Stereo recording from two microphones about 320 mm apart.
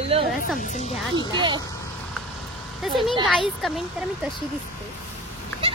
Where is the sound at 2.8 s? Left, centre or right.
Centre.